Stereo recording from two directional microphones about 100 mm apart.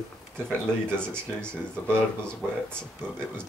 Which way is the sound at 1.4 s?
10° left (ahead or behind).